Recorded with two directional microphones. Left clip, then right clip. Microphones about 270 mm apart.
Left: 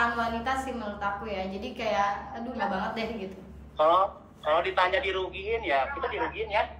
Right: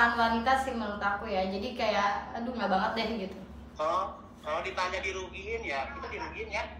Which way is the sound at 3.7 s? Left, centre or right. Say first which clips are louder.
Left 8 dB; centre.